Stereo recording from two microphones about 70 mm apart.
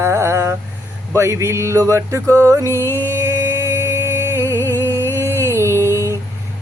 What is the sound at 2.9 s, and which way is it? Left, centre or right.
Music, right.